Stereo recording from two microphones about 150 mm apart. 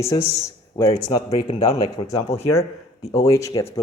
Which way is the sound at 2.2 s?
45° left (ahead or behind).